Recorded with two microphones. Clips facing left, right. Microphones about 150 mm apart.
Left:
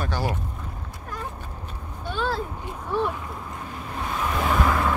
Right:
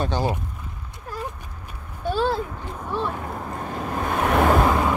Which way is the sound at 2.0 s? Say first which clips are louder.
Right 5 dB; 35° right (ahead or behind).